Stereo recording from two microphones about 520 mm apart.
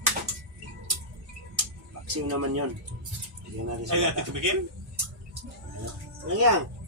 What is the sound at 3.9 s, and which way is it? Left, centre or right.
Speech, right.